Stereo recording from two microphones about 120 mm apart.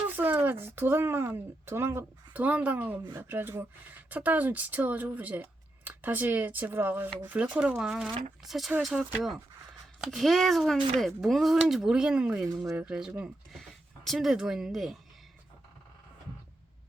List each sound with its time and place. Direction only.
0.2 s speech: 15° right (ahead or behind)
13.5 s speech: centre (ahead or behind)